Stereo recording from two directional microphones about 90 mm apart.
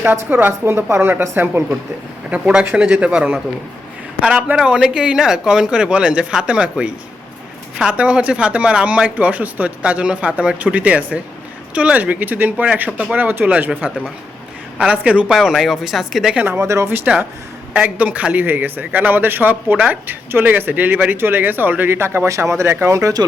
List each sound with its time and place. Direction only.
0.0 s a man's voice: 20° right (ahead or behind)
2.3 s speech: 15° right (ahead or behind)
15.4 s speech: centre (ahead or behind)
16.3 s speech: 15° right (ahead or behind)
16.6 s a man's voice: 35° right (ahead or behind)